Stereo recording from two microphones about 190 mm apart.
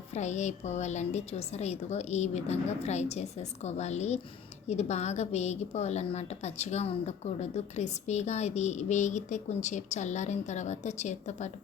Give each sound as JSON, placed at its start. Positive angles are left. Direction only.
{"t": 0.1, "sound": "a woman's voice", "side_deg": 35}